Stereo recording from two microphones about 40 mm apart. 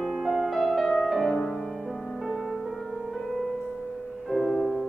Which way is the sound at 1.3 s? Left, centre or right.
Centre.